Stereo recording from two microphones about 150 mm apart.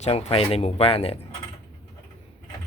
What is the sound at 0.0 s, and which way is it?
Speech, 45° left (ahead or behind).